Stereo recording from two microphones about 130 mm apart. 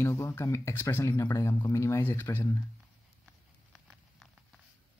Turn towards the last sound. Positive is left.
turn(degrees=0)  # may be behind; listen again after turning